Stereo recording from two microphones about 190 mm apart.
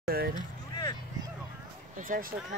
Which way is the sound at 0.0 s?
55° right (ahead or behind).